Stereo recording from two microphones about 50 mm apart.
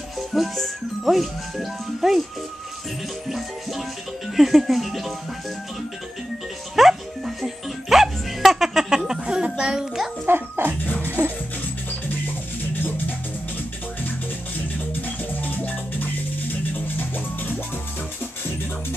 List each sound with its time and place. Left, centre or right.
0.3 s speech: centre
3.3 s speech: centre
6.7 s music: centre
10.2 s dog: right
11.1 s music: right
12.7 s music: left
15.0 s music: left